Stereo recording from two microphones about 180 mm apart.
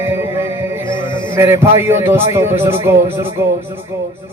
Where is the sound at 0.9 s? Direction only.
25° left (ahead or behind).